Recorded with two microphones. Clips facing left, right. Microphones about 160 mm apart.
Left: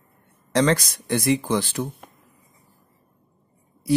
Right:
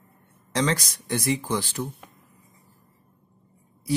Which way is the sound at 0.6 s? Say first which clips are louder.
Left 5 dB; 60° left (ahead or behind).